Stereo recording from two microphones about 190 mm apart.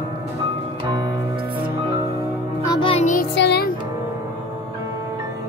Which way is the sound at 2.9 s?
40° left (ahead or behind).